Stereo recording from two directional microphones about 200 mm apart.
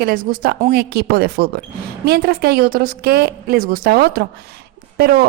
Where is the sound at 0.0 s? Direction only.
45° right (ahead or behind).